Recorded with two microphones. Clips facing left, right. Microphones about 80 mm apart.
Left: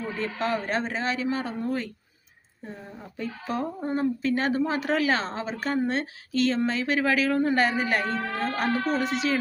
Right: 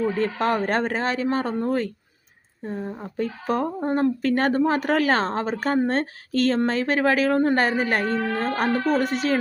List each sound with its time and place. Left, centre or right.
0.2 s speech: right